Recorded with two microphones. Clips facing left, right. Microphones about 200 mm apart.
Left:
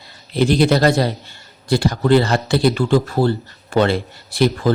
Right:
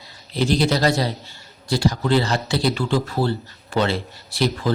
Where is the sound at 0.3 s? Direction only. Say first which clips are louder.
Left 5 dB; 55° left (ahead or behind).